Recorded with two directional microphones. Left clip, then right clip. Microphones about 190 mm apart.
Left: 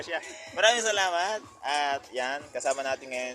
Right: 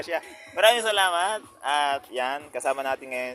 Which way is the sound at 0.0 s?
40° right (ahead or behind).